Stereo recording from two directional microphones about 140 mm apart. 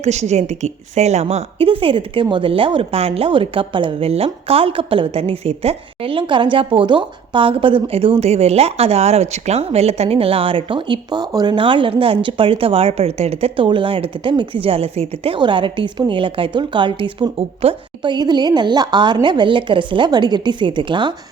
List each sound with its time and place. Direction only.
0.0 s a woman's voice: 55° right (ahead or behind); by 21.1 s 35° right (ahead or behind)